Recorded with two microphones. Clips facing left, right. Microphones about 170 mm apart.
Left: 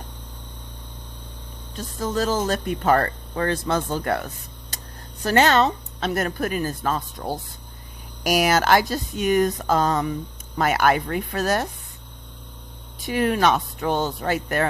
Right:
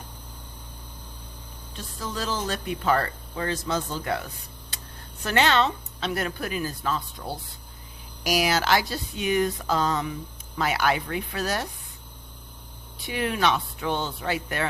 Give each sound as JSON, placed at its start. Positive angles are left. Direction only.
{"t": 1.7, "sound": "speech", "side_deg": 45}
{"t": 4.7, "sound": "a sound", "side_deg": 45}
{"t": 5.2, "sound": "speech", "side_deg": 45}
{"t": 13.0, "sound": "speech", "side_deg": 45}